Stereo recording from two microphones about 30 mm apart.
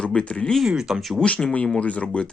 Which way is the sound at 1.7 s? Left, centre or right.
Left.